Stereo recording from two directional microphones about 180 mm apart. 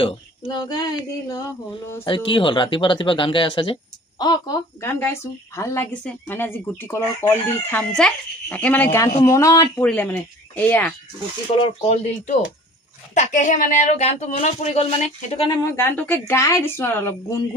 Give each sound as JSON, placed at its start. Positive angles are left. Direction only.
{"t": 0.5, "sound": "speech", "side_deg": 25}
{"t": 4.8, "sound": "chicken", "side_deg": 15}
{"t": 11.5, "sound": "speech", "side_deg": 30}
{"t": 15.6, "sound": "chicken", "side_deg": 15}